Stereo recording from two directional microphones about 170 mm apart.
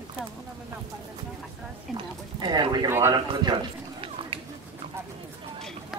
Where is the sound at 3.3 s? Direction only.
25° right (ahead or behind).